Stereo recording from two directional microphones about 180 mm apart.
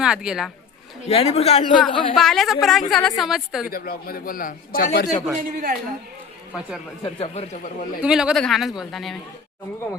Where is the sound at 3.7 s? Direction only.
55° left (ahead or behind).